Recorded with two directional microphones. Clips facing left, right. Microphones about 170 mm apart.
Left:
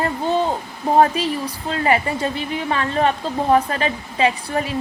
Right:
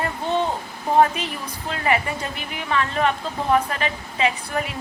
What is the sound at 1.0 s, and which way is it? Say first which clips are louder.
A woman's voice: left 2 dB; 35° left (ahead or behind).